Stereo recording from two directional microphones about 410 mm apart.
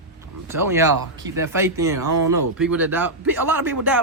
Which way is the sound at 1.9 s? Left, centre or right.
Right.